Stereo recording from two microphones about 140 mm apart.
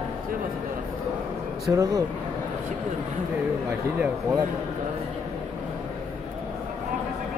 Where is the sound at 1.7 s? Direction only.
25° right (ahead or behind).